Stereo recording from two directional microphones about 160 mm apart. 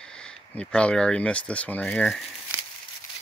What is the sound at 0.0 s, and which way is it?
Speech, 5° left (ahead or behind).